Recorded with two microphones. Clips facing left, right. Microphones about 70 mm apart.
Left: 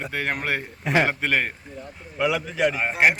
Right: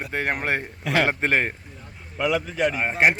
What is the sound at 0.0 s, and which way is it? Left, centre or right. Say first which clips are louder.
A man's voice: right 1 dB; right.